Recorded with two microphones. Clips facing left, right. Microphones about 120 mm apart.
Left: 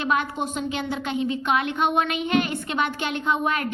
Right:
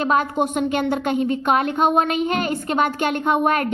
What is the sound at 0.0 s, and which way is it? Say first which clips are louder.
A woman's voice: right 5 dB; 40° right (ahead or behind).